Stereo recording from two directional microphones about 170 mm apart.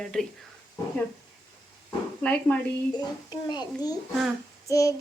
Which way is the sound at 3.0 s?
25° left (ahead or behind).